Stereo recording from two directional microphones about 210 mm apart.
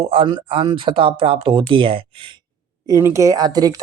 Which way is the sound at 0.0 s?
25° right (ahead or behind).